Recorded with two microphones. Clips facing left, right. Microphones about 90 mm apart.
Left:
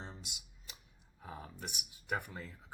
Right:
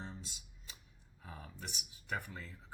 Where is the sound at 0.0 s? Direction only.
20° left (ahead or behind).